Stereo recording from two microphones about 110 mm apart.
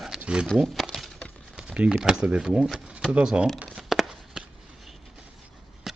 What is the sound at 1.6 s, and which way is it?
Speech, 10° right (ahead or behind).